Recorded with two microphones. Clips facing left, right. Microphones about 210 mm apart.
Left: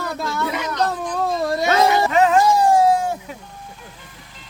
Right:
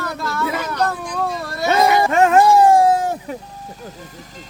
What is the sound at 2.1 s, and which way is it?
Music, 50° right (ahead or behind).